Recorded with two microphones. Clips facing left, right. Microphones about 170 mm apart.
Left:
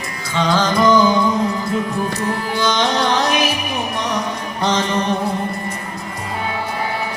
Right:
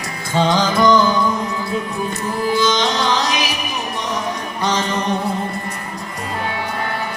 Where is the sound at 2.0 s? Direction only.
65° left (ahead or behind).